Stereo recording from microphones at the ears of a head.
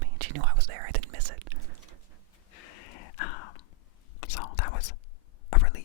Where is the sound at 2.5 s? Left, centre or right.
Left.